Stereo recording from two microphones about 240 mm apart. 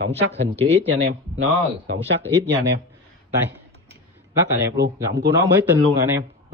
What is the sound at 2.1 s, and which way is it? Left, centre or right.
Speech, right.